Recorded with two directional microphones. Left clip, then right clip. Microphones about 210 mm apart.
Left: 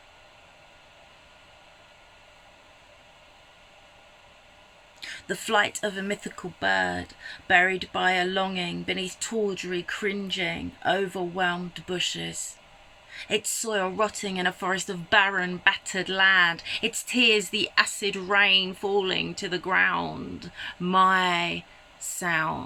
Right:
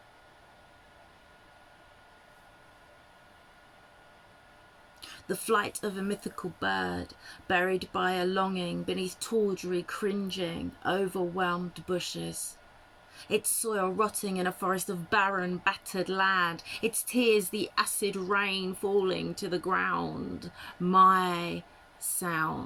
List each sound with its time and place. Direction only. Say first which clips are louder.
4.9 s speech: left 4 dB; 10° right (ahead or behind)